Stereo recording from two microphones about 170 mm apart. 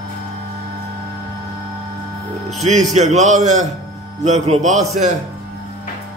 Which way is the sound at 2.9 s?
45° right (ahead or behind).